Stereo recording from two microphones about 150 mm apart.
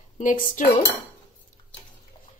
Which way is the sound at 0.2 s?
60° left (ahead or behind).